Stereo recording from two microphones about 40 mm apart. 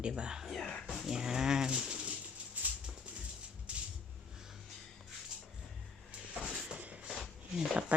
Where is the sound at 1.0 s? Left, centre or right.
Centre.